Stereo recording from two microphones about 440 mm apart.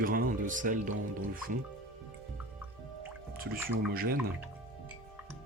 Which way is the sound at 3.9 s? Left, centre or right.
Centre.